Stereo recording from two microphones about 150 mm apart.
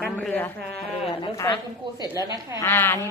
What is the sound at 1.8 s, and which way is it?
Speech, 35° right (ahead or behind).